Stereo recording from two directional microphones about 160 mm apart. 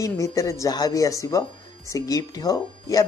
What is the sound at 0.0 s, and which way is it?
Speech, 20° left (ahead or behind).